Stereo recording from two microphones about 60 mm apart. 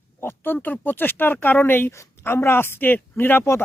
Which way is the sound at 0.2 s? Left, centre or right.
Left.